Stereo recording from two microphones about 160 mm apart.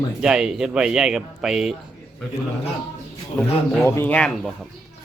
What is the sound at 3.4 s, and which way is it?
Speech, 10° left (ahead or behind).